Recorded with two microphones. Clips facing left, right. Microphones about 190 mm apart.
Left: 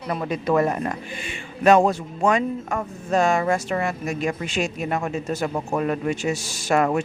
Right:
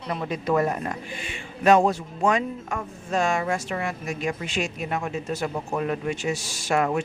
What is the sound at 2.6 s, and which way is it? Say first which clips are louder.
Speech: left 5 dB; 40° left (ahead or behind).